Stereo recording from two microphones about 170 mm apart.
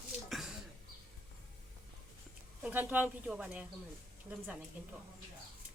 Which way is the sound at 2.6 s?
10° right (ahead or behind).